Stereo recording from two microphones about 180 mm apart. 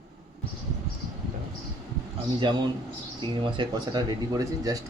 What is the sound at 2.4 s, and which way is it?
Speech, 25° right (ahead or behind).